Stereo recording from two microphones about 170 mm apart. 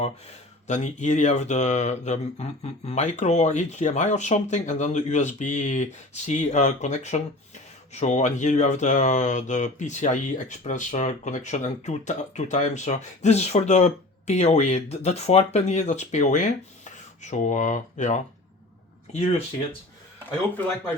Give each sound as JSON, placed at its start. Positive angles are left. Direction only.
{"t": 0.0, "sound": "speech", "side_deg": 40}